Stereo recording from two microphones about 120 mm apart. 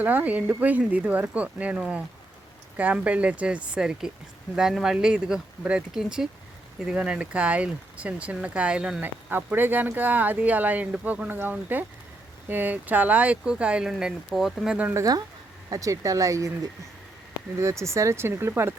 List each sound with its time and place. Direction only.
0.0 s speech: 15° right (ahead or behind)
14.8 s speech: 15° right (ahead or behind)
15.7 s speech: 25° right (ahead or behind)
17.6 s speech: 25° right (ahead or behind)